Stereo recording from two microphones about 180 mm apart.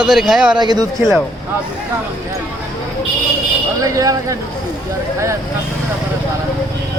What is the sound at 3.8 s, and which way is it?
Speech, 20° right (ahead or behind).